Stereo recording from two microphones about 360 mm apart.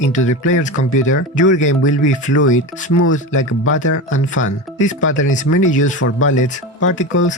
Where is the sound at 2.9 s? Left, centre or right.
Left.